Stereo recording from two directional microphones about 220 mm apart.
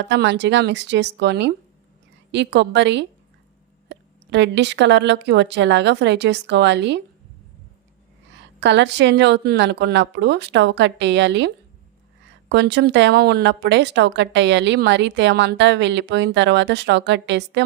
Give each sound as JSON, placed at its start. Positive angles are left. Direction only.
{"t": 0.0, "sound": "a woman's voice", "side_deg": -55}
{"t": 8.6, "sound": "a woman's voice", "side_deg": -50}